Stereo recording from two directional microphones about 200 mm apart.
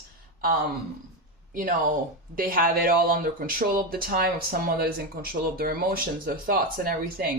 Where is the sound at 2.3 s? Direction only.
45° right (ahead or behind).